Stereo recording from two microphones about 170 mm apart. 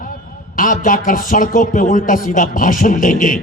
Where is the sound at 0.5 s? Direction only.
55° left (ahead or behind).